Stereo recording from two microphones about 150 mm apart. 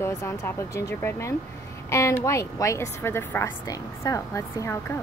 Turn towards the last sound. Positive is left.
turn(degrees=20)  # may be behind; listen again after turning